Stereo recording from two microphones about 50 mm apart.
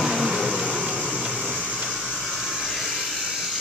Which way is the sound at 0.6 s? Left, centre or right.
Centre.